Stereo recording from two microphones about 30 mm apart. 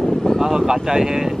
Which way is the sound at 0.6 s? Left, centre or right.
Right.